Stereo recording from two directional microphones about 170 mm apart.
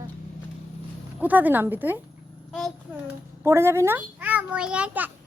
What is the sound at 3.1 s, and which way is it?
A child's voice, 15° right (ahead or behind).